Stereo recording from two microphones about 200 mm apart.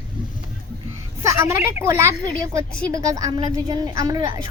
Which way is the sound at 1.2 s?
15° right (ahead or behind).